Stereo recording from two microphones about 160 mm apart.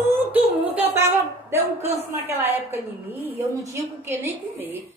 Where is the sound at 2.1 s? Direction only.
15° right (ahead or behind).